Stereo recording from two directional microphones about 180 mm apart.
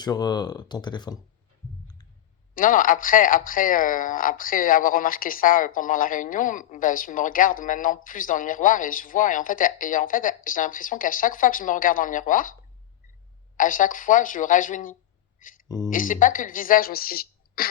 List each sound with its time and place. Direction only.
0.0 s speech: 20° left (ahead or behind)
2.6 s speech: 50° left (ahead or behind)
13.6 s speech: 50° left (ahead or behind)
15.4 s a sound: 50° left (ahead or behind)
15.9 s speech: 45° left (ahead or behind)